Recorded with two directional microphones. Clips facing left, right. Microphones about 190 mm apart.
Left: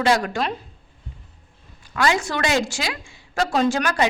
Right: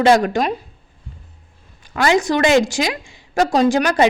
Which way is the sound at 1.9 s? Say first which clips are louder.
Right 6 dB; 20° right (ahead or behind).